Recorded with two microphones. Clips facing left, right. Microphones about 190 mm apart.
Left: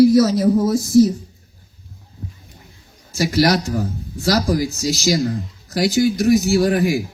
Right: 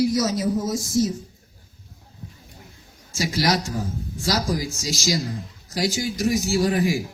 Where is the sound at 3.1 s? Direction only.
65° left (ahead or behind).